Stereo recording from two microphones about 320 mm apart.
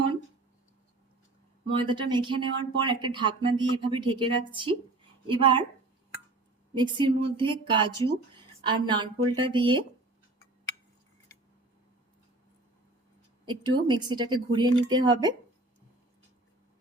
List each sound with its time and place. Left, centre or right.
1.6 s speech: centre
6.7 s speech: centre
13.4 s speech: centre